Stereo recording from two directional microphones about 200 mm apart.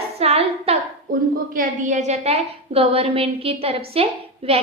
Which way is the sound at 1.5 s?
40° right (ahead or behind).